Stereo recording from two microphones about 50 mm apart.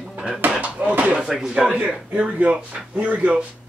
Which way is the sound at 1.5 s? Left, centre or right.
Right.